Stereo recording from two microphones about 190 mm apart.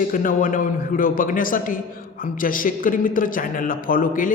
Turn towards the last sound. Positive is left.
turn(degrees=45)  # may be behind; listen again after turning